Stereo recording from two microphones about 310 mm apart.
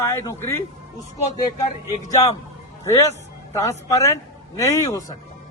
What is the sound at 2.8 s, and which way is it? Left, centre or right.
A man's voice, centre.